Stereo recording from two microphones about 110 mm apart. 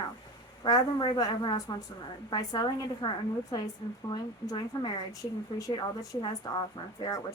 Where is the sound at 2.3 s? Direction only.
35° left (ahead or behind).